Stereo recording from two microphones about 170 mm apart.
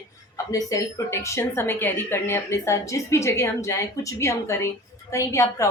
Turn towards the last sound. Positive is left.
turn(degrees=15)  # may be behind; listen again after turning